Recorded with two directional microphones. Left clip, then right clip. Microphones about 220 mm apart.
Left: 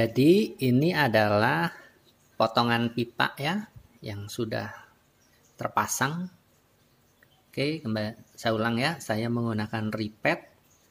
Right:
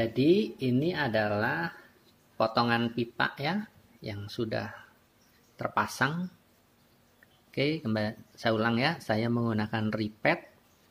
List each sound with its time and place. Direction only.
0.0 s speech: 25° left (ahead or behind)
2.3 s speech: 15° left (ahead or behind)
7.5 s speech: centre (ahead or behind)